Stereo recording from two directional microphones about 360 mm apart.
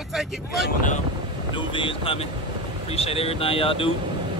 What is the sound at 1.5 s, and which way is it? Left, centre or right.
Speech, centre.